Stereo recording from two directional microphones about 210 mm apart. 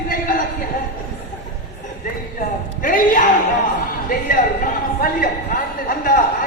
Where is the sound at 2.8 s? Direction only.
40° left (ahead or behind).